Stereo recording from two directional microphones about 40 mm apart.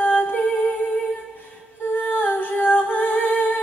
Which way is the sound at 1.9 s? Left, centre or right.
Left.